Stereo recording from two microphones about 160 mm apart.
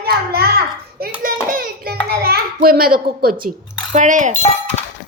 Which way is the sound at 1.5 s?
60° right (ahead or behind).